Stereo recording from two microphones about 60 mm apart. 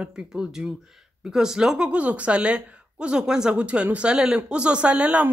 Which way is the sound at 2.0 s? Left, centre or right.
Right.